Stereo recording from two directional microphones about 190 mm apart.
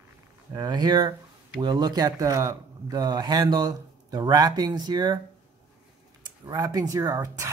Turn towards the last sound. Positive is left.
turn(degrees=-15)  # may be behind; listen again after turning